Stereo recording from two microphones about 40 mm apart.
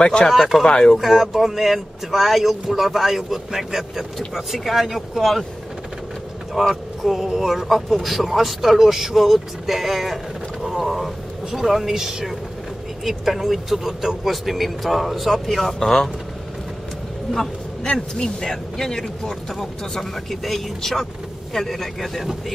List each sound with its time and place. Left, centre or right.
0.0 s speech: left
0.3 s speech: centre
0.7 s speech: centre
0.9 s speech: centre
6.7 s speech: centre
17.8 s speech: centre